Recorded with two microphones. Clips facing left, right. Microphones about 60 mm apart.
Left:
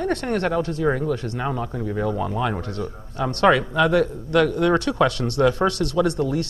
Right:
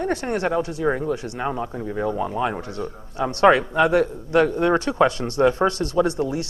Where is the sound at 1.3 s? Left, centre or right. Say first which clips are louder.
Even; centre.